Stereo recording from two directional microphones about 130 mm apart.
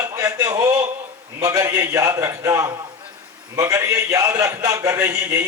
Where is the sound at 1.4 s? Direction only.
25° right (ahead or behind).